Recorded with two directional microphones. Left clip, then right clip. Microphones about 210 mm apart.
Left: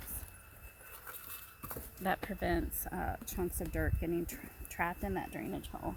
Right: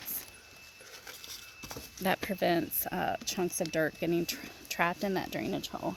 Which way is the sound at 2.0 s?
50° right (ahead or behind).